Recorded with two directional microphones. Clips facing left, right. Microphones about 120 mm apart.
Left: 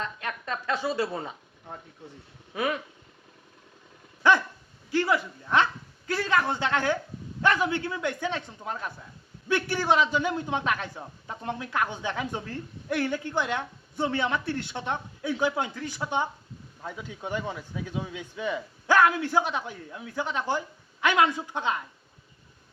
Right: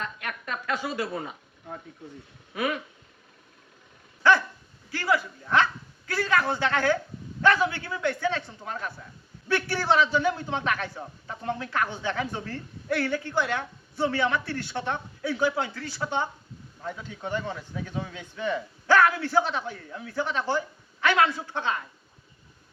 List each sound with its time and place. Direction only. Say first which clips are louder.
0.0 s a man's voice: left 1 dB; 25° left (ahead or behind)
4.2 s dog: right 1 dB; 20° left (ahead or behind)
4.9 s a man's voice: left 1 dB; 20° left (ahead or behind)